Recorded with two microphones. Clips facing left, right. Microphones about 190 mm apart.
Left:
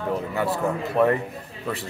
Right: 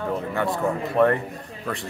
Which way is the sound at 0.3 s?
5° left (ahead or behind).